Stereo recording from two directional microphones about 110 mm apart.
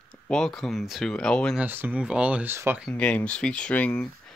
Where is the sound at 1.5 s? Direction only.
20° right (ahead or behind).